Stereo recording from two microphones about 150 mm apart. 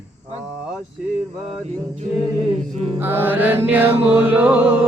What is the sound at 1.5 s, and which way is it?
Music, 45° right (ahead or behind).